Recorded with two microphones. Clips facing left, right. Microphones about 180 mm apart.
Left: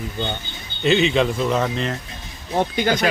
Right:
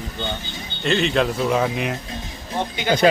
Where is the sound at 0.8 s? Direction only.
Centre (ahead or behind).